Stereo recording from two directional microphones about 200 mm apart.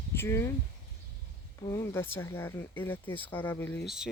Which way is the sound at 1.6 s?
15° left (ahead or behind).